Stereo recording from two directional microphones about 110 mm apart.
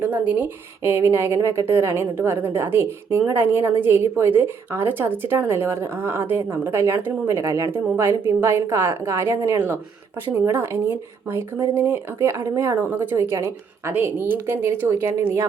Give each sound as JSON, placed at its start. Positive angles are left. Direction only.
{"t": 0.0, "sound": "a woman's voice", "side_deg": -15}